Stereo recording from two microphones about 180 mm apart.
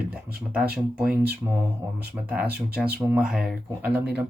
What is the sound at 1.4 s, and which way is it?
Speech, 15° right (ahead or behind).